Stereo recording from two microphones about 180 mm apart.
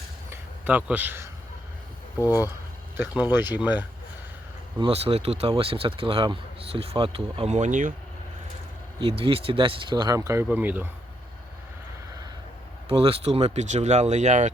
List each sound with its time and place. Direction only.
0.3 s a sound: 10° right (ahead or behind)
2.1 s speech: 20° left (ahead or behind)
3.3 s speech: 10° right (ahead or behind)
4.8 s speech: 30° right (ahead or behind)
9.0 s speech: 30° right (ahead or behind); by 10.8 s 10° right (ahead or behind)
12.9 s speech: 30° right (ahead or behind)